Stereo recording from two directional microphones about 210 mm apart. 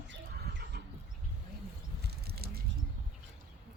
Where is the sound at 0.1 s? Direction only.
50° right (ahead or behind).